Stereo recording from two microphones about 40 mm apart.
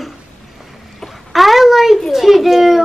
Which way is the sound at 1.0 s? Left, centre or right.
Centre.